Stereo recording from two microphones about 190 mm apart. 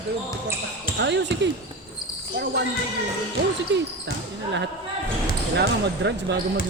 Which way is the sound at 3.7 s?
70° right (ahead or behind).